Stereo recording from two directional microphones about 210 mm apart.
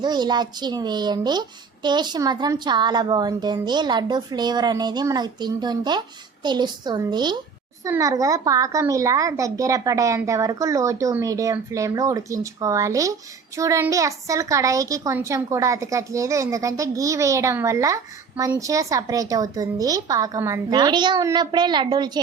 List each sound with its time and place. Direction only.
0.0 s a child's voice: 20° right (ahead or behind)